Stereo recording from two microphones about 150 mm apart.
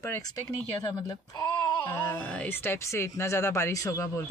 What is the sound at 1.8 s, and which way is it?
Speech, 15° left (ahead or behind).